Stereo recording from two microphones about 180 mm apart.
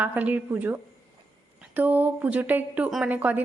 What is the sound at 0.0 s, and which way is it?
A woman's voice, 10° right (ahead or behind).